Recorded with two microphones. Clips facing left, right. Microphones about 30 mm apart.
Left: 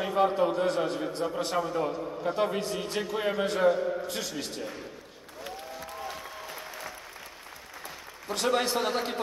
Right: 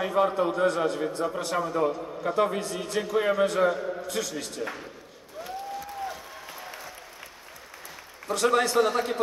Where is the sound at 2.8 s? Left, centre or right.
Left.